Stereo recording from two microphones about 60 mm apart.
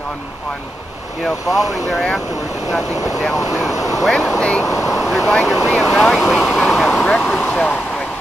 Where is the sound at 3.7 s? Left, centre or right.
Left.